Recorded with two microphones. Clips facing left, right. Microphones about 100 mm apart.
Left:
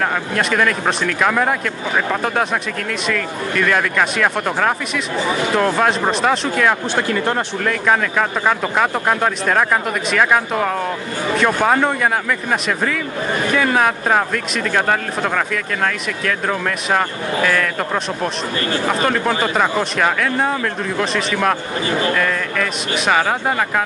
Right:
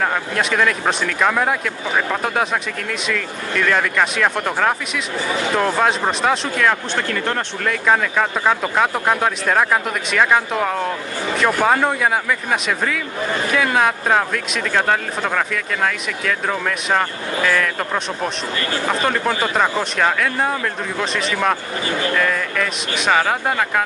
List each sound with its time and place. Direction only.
0.0 s speech: centre (ahead or behind)
7.0 s speech: 15° left (ahead or behind)
7.6 s speech: centre (ahead or behind)